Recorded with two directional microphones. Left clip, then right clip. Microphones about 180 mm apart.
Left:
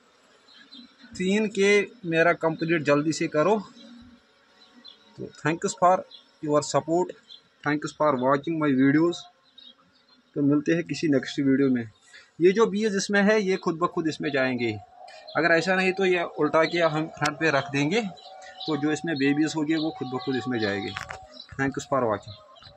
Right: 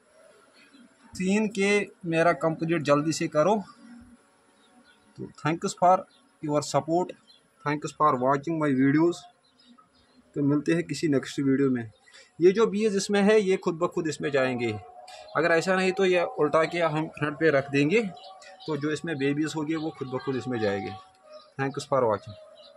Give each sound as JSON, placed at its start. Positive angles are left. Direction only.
{"t": 1.1, "sound": "a man's voice", "side_deg": 0}
{"t": 5.4, "sound": "a man's voice", "side_deg": 5}
{"t": 10.3, "sound": "a man's voice", "side_deg": 5}
{"t": 18.7, "sound": "a man's voice", "side_deg": 5}